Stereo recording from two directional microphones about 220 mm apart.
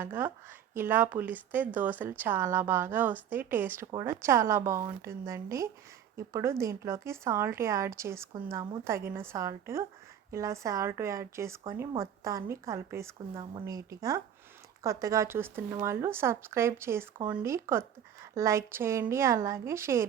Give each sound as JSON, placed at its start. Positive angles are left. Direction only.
{"t": 0.0, "sound": "speech", "side_deg": -10}